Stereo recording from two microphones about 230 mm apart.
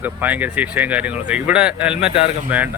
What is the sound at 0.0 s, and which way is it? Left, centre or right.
Speech, centre.